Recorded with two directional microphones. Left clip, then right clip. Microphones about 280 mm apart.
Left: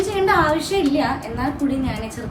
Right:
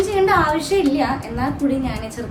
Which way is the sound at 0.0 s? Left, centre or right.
Centre.